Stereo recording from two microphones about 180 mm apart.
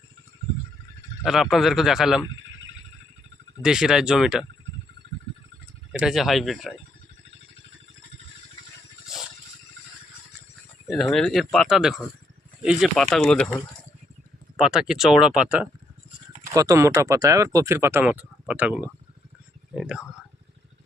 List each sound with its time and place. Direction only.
1.2 s speech: centre (ahead or behind)
3.6 s speech: 5° right (ahead or behind)
5.9 s speech: 5° right (ahead or behind)
10.8 s speech: centre (ahead or behind)
14.6 s speech: 5° right (ahead or behind)
16.6 s speech: 15° right (ahead or behind)